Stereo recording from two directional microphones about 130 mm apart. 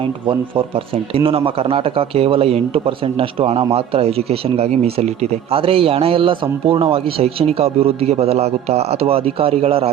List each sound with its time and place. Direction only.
0.0 s a man's voice: 40° right (ahead or behind)